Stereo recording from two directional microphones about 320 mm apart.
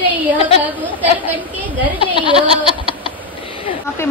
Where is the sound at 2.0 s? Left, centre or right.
Centre.